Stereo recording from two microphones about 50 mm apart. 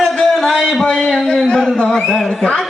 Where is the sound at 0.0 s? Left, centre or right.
Centre.